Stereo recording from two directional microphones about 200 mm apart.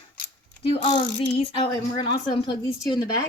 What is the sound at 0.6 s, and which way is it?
Speech, 30° left (ahead or behind).